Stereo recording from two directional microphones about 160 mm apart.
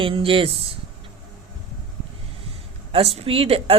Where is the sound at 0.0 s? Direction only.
35° right (ahead or behind).